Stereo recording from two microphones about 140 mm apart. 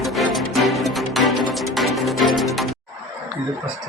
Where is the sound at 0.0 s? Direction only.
Centre (ahead or behind).